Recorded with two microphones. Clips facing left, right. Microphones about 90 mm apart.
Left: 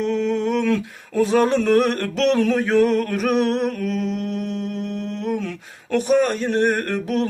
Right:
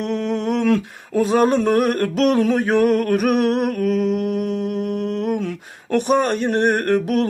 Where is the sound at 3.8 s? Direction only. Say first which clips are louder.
Right 5 dB; 60° right (ahead or behind).